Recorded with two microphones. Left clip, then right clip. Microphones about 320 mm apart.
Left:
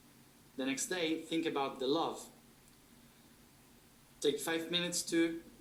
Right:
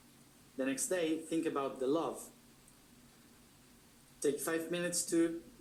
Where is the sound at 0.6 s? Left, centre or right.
Centre.